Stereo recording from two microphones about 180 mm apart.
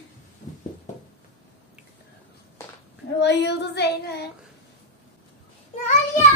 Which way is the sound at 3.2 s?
70° left (ahead or behind).